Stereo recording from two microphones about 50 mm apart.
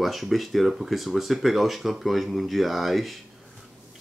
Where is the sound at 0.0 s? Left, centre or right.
Centre.